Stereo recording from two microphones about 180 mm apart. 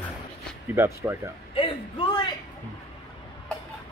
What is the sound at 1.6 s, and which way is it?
Speech, 30° left (ahead or behind).